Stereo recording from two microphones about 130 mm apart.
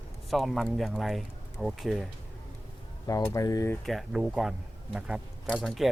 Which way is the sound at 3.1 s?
25° left (ahead or behind).